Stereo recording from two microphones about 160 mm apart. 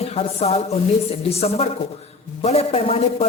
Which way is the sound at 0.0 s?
40° left (ahead or behind).